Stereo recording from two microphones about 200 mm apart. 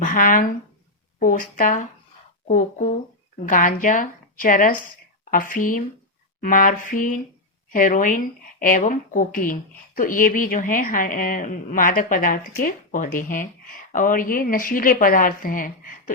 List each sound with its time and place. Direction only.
0.0 s a woman's voice: 40° left (ahead or behind)